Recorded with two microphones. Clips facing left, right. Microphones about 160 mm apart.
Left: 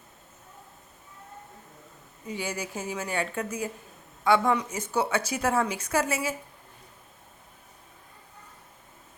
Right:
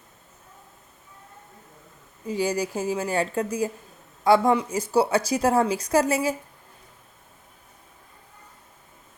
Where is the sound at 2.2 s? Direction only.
35° right (ahead or behind).